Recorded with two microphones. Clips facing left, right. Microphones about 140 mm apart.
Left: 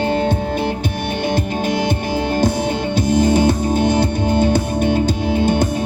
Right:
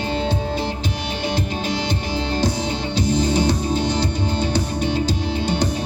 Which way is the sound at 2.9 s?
55° left (ahead or behind).